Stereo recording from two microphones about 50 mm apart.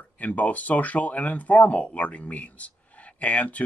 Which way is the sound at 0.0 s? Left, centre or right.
Left.